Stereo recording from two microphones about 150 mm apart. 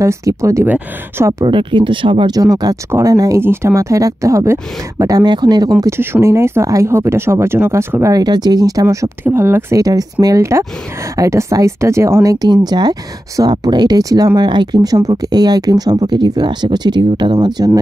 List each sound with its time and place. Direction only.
0.0 s speech: 20° right (ahead or behind)
1.4 s speech: 35° right (ahead or behind)